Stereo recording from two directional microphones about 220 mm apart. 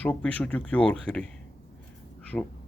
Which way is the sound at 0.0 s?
5° left (ahead or behind).